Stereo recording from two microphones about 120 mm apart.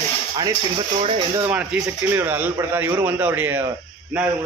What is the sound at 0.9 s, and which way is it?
Speech, 55° right (ahead or behind).